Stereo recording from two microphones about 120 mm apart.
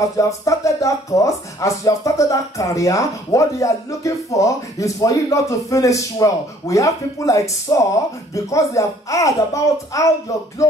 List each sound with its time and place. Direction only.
0.5 s speech: 25° left (ahead or behind)